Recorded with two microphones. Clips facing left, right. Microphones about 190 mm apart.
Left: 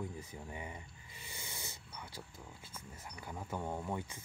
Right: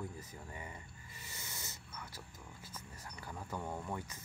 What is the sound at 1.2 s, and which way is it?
Dog, 10° left (ahead or behind).